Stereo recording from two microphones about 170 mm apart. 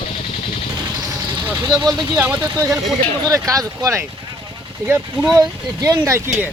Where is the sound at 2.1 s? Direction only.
15° right (ahead or behind).